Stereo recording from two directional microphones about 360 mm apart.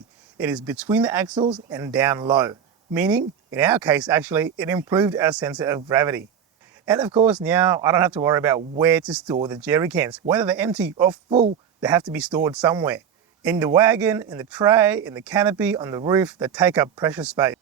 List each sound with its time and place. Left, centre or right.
0.3 s speech: centre
11.8 s speech: centre